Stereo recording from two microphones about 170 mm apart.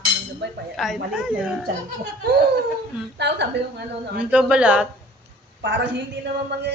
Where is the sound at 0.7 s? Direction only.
Centre (ahead or behind).